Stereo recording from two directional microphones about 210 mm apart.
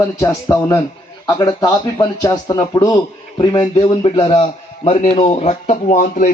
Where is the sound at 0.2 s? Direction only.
15° left (ahead or behind).